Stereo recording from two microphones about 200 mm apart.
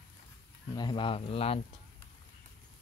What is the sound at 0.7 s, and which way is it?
Speech, 25° left (ahead or behind).